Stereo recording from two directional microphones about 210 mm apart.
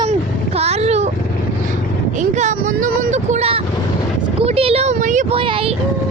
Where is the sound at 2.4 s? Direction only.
35° right (ahead or behind).